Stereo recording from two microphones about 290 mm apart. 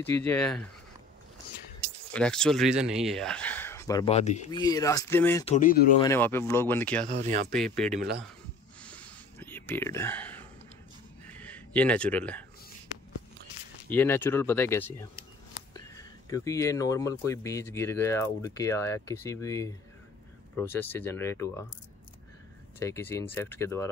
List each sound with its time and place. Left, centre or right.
0.0 s speech: centre
2.1 s speech: centre
5.4 s speech: left
5.9 s speech: centre
7.1 s speech: right
7.5 s speech: centre
7.9 s speech: right
8.8 s a sound: centre
11.7 s speech: centre
13.8 s speech: centre
22.8 s speech: centre